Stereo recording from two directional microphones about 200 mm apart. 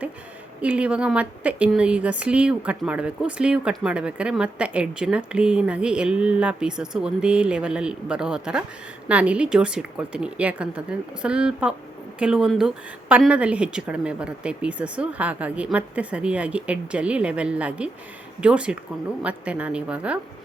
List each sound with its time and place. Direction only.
0.6 s a woman's voice: 5° right (ahead or behind)